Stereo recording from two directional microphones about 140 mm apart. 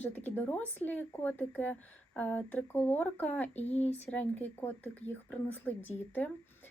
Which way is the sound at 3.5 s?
50° left (ahead or behind).